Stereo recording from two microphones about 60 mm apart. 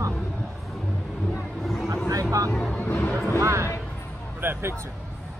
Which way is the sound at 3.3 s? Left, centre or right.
Right.